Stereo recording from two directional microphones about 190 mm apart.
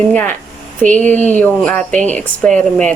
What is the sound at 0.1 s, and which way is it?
Speech, 10° left (ahead or behind).